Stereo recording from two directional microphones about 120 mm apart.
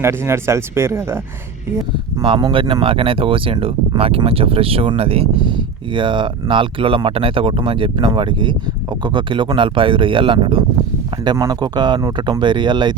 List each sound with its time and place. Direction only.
0.0 s speech: 20° right (ahead or behind)
2.2 s speech: 45° right (ahead or behind)